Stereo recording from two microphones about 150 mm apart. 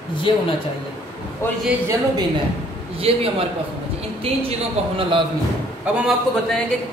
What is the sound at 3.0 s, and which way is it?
Speech, 40° right (ahead or behind).